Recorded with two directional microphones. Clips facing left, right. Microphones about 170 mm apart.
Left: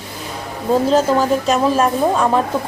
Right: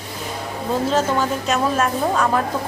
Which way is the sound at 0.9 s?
35° left (ahead or behind).